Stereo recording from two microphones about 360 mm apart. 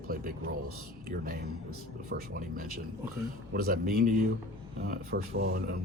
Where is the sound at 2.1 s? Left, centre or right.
Right.